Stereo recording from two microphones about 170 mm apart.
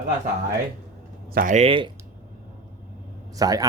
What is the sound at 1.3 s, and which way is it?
Speech, 60° right (ahead or behind).